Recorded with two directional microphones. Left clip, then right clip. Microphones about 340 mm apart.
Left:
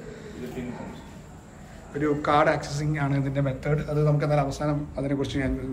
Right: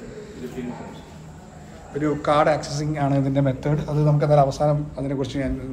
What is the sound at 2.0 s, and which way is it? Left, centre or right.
A man's voice, centre.